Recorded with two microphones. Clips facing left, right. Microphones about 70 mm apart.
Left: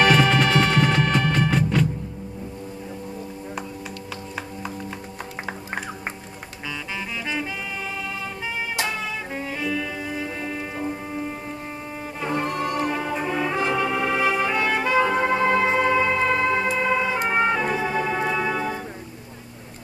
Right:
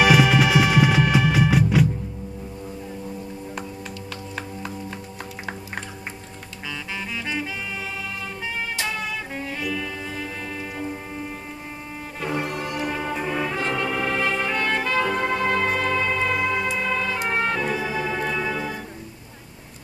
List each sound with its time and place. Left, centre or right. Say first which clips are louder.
0.0 s music: right 1 dB; centre
8.8 s music: even; centre
12.5 s music: left 4 dB; left
12.8 s brass instrument: left 1 dB; centre
16.7 s music: left 3 dB; centre
17.3 s organ: left 2 dB; centre